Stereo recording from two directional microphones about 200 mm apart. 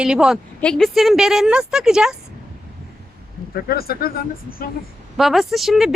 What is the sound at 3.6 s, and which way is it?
Speech, 50° left (ahead or behind).